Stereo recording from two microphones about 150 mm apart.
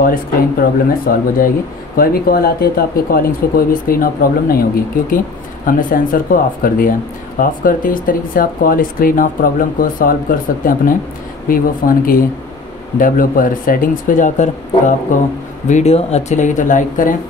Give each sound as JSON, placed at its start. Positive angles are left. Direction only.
{"t": 0.0, "sound": "speech", "side_deg": 75}
{"t": 2.0, "sound": "speech", "side_deg": 80}
{"t": 5.7, "sound": "speech", "side_deg": 65}
{"t": 13.0, "sound": "speech", "side_deg": 65}
{"t": 15.7, "sound": "speech", "side_deg": 45}